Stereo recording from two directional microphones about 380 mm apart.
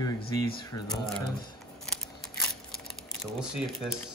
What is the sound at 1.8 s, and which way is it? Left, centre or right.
Crumpling, centre.